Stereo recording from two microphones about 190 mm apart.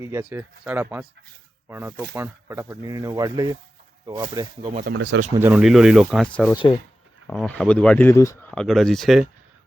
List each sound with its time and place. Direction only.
0.0 s speech: 10° right (ahead or behind)
4.9 s speech: 65° right (ahead or behind)
5.4 s speech: 5° right (ahead or behind)
6.5 s speech: 25° left (ahead or behind)
7.3 s speech: 5° left (ahead or behind)
8.4 s speech: centre (ahead or behind)